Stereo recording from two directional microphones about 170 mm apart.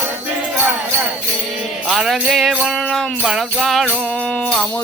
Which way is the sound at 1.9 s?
Centre (ahead or behind).